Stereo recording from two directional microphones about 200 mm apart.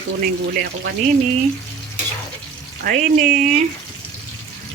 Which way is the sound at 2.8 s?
45° right (ahead or behind).